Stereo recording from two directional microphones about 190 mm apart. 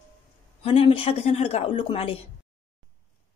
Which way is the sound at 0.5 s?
30° left (ahead or behind).